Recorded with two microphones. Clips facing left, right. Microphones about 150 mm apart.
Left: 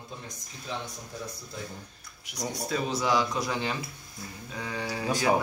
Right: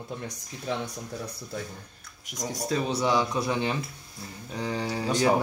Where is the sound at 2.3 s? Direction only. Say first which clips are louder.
Right 2 dB; 45° right (ahead or behind).